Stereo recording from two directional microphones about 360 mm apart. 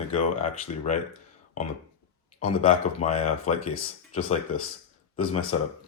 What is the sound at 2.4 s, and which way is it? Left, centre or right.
Speech, centre.